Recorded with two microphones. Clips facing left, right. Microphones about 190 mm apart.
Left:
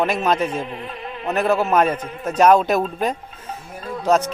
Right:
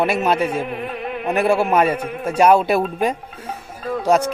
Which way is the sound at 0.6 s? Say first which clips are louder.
Right 5 dB; 60° right (ahead or behind).